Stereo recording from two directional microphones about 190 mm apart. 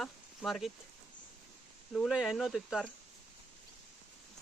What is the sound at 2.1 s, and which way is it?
Speech, 5° right (ahead or behind).